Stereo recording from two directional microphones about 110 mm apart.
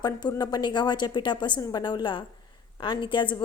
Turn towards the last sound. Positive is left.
turn(degrees=45)  # may be behind; listen again after turning